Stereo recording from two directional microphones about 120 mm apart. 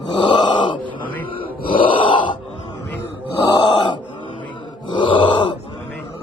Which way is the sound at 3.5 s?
45° left (ahead or behind).